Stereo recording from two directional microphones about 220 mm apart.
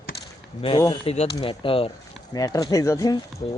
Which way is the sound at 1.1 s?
25° left (ahead or behind).